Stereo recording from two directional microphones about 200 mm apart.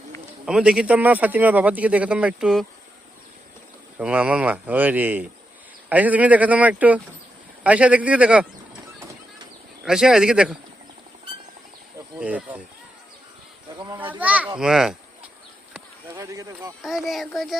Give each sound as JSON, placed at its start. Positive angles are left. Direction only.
{"t": 0.4, "sound": "speech", "side_deg": -5}
{"t": 3.9, "sound": "speech", "side_deg": -5}
{"t": 9.8, "sound": "speech", "side_deg": -5}
{"t": 12.2, "sound": "speech", "side_deg": -5}
{"t": 13.7, "sound": "speech", "side_deg": -20}
{"t": 14.1, "sound": "children playing", "side_deg": -10}
{"t": 14.6, "sound": "speech", "side_deg": -5}
{"t": 16.0, "sound": "speech", "side_deg": -15}
{"t": 16.8, "sound": "speech", "side_deg": 0}